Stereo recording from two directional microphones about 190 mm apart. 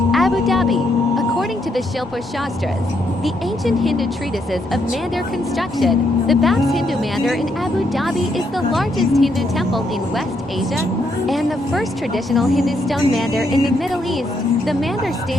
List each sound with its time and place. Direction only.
0.1 s a sound: centre (ahead or behind)
3.2 s speech: centre (ahead or behind)
5.5 s speech: centre (ahead or behind)
11.3 s speech: centre (ahead or behind)